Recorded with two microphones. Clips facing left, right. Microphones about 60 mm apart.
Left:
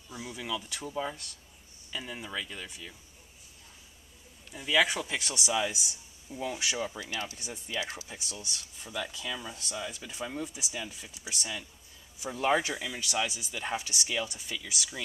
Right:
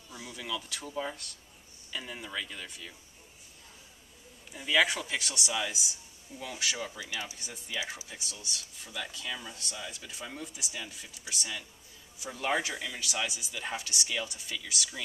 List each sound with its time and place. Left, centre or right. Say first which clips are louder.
0.1 s speech: left 2 dB; centre
4.5 s speech: even; centre
6.3 s speech: left 3 dB; centre
7.0 s speech: left 2 dB; centre
8.1 s speech: left 2 dB; centre
8.5 s speech: left 4 dB; centre
12.3 s speech: left 4 dB; centre